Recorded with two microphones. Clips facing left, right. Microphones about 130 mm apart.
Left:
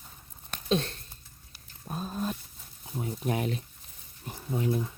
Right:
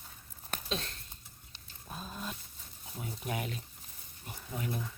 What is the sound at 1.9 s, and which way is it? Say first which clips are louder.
Dog: left 9 dB; 45° left (ahead or behind).